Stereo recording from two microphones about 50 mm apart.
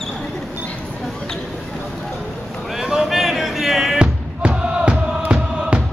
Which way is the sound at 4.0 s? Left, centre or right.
Right.